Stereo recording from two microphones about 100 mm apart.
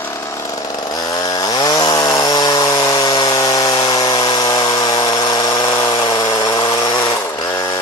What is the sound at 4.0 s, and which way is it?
Power tool, 40° left (ahead or behind).